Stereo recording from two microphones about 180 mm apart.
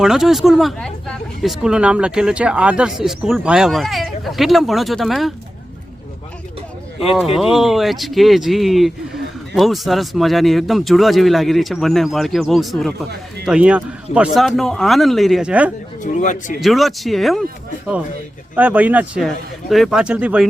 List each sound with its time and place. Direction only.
0.0 s speech: centre (ahead or behind)
7.3 s speech: centre (ahead or behind)
16.1 s speech: 45° left (ahead or behind)
16.6 s speech: centre (ahead or behind)
18.5 s speech: 10° right (ahead or behind)